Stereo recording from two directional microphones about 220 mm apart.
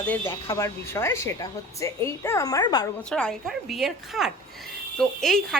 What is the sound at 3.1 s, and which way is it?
A woman's voice, 5° left (ahead or behind).